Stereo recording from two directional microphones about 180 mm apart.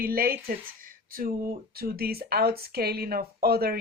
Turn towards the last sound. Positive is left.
turn(degrees=-60)  # may be behind; listen again after turning